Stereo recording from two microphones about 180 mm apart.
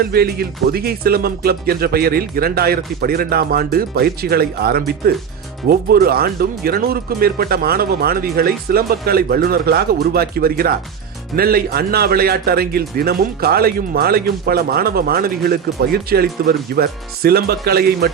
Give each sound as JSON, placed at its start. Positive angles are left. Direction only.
{"t": 0.0, "sound": "a man's voice", "side_deg": -60}